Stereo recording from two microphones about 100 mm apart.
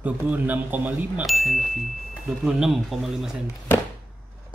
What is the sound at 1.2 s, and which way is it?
Speech, centre (ahead or behind).